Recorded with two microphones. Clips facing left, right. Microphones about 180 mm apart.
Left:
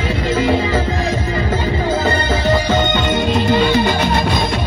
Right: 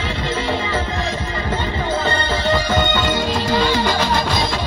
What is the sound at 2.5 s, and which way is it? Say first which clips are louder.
Music: left 2 dB; 20° left (ahead or behind).